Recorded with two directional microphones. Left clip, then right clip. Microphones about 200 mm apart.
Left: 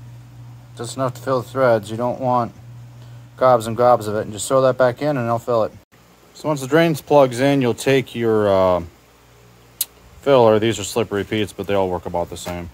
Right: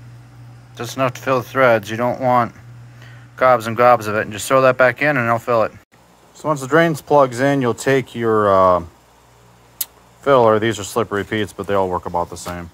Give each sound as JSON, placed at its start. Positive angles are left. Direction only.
{"t": 0.7, "sound": "speech", "side_deg": -25}
{"t": 6.3, "sound": "speech", "side_deg": 0}